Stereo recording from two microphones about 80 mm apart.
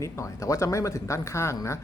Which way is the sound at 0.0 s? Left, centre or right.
Left.